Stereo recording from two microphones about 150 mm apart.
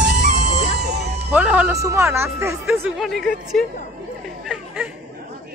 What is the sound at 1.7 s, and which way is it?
Speech, 20° right (ahead or behind).